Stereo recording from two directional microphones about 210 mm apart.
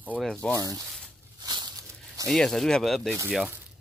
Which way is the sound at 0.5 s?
15° right (ahead or behind).